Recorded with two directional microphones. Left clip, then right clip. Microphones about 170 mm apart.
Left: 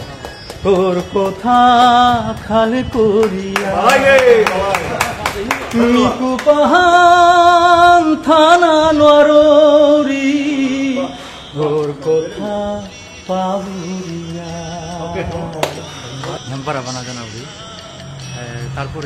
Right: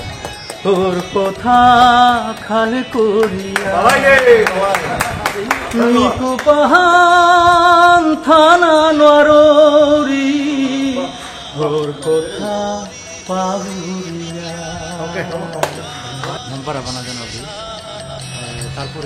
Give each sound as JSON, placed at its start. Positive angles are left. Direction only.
{"t": 1.1, "sound": "music", "side_deg": 15}
{"t": 3.5, "sound": "a man's voice", "side_deg": -15}
{"t": 5.9, "sound": "music", "side_deg": 10}